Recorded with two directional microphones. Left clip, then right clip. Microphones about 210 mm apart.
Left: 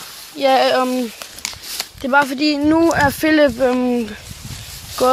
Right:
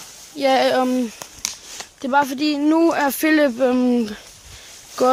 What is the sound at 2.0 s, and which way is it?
Speech, 10° right (ahead or behind).